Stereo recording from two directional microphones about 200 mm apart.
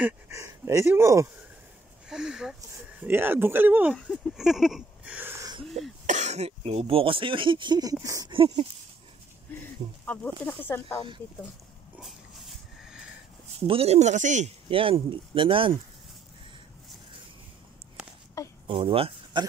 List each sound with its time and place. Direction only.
0.0 s speech: 15° right (ahead or behind)
2.0 s speech: 5° right (ahead or behind)
3.9 s a sound: centre (ahead or behind); by 5.7 s 20° right (ahead or behind)
6.0 s speech: 35° right (ahead or behind)
10.0 s speech: 10° left (ahead or behind)
12.0 s dog: centre (ahead or behind)
13.7 s speech: 30° right (ahead or behind)
18.4 s a sound: 15° left (ahead or behind)
18.7 s speech: 25° right (ahead or behind)